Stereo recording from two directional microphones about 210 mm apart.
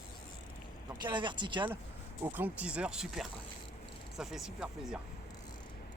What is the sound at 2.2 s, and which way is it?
Speech, 10° right (ahead or behind).